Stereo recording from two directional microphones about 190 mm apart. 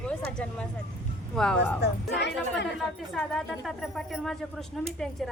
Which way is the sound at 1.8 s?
65° left (ahead or behind).